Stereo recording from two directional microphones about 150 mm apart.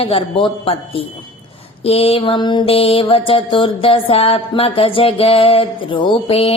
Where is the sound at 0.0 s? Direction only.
35° left (ahead or behind).